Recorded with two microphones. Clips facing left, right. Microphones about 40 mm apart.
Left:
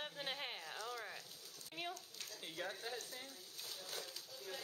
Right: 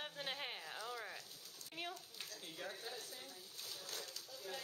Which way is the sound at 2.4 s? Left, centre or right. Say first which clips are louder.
Left 4 dB; centre.